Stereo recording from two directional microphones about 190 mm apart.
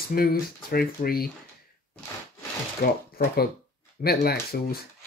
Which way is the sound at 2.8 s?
45° left (ahead or behind).